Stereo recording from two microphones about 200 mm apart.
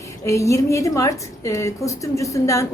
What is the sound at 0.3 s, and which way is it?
A woman's voice, 15° left (ahead or behind).